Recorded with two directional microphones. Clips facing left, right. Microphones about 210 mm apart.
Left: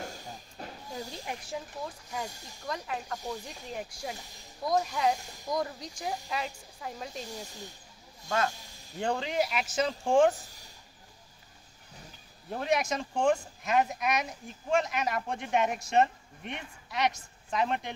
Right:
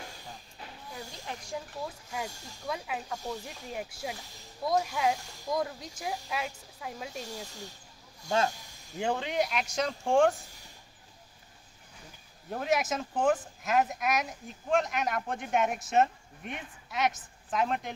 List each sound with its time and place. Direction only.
0.6 s vehicle: 45° left (ahead or behind)
1.2 s speech: 5° left (ahead or behind)
2.1 s speech: 5° right (ahead or behind)
8.3 s speech: 25° right (ahead or behind)
8.9 s speech: 5° right (ahead or behind)
12.4 s speech: centre (ahead or behind)